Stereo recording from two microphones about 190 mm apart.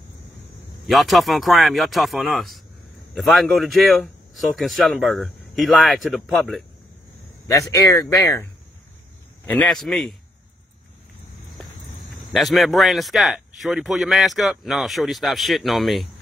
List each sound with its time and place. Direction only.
0.8 s speech: centre (ahead or behind)
7.5 s speech: 15° left (ahead or behind)
9.5 s speech: 5° left (ahead or behind)
12.3 s speech: centre (ahead or behind)